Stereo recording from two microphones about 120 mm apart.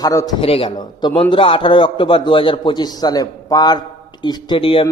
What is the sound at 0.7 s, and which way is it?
A man's voice, 40° left (ahead or behind).